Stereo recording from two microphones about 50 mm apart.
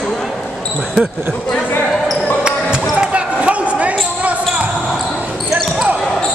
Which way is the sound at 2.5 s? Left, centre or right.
Centre.